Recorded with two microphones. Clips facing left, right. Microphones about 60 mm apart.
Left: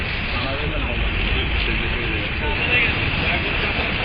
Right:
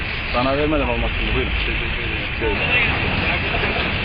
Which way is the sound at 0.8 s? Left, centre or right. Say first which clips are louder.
Right 5 dB; centre.